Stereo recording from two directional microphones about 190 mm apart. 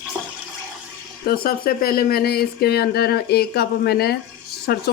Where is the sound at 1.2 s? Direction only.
50° left (ahead or behind).